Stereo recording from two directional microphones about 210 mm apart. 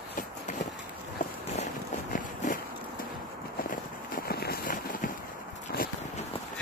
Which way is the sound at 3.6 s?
45° left (ahead or behind).